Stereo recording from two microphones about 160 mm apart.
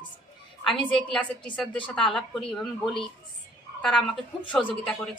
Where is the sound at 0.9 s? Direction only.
5° left (ahead or behind).